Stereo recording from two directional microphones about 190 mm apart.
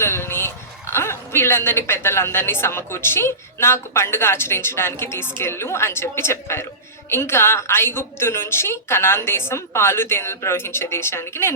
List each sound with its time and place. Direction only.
0.0 s a man's voice: 15° left (ahead or behind)